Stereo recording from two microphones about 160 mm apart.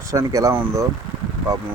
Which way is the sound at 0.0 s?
20° right (ahead or behind).